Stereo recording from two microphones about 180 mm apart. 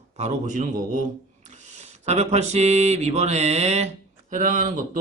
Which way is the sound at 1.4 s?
40° right (ahead or behind).